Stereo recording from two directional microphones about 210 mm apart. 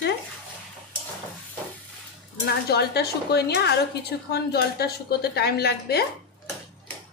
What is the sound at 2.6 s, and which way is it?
A woman's voice, 50° left (ahead or behind).